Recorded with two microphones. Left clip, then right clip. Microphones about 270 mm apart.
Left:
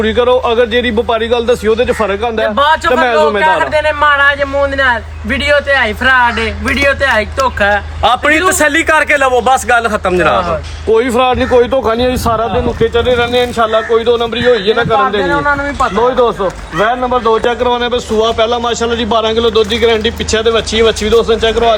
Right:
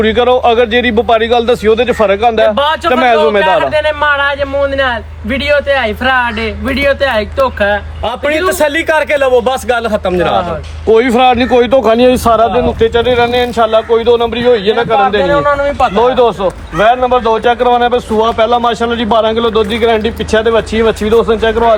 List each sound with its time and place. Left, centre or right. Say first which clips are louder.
0.0 s speech: right 2 dB; right
2.6 s speech: left 2 dB; centre
2.9 s speech: right 1 dB; right
3.7 s speech: left 1 dB; centre
8.0 s a man's voice: left 7 dB; centre
8.3 s a man's voice: left 1 dB; centre
10.9 s speech: right 2 dB; right